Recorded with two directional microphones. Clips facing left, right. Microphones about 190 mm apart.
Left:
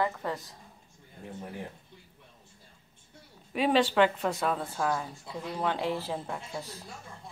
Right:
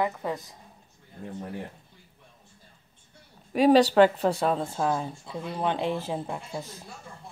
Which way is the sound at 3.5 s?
40° right (ahead or behind).